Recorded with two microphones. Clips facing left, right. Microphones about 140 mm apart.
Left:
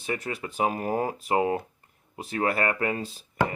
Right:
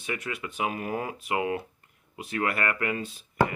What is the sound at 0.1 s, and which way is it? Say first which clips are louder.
Speech: left 2 dB; 35° left (ahead or behind).